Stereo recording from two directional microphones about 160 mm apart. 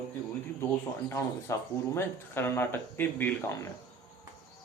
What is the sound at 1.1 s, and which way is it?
Speech, 15° left (ahead or behind).